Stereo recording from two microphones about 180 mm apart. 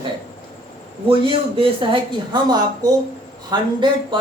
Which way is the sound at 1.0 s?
30° right (ahead or behind).